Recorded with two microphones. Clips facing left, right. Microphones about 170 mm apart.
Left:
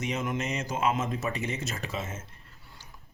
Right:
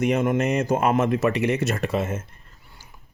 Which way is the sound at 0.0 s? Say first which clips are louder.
Right 10 dB; 60° right (ahead or behind).